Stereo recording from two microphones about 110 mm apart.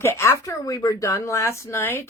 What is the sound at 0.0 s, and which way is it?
Speech, 25° left (ahead or behind).